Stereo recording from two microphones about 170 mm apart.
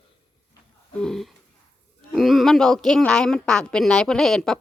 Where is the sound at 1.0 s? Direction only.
Centre (ahead or behind).